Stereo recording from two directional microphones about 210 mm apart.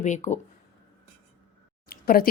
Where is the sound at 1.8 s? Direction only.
45° left (ahead or behind).